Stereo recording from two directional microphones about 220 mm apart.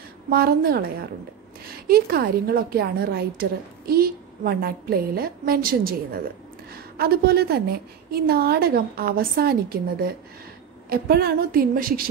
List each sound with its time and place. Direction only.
0.3 s a woman's voice: 45° right (ahead or behind)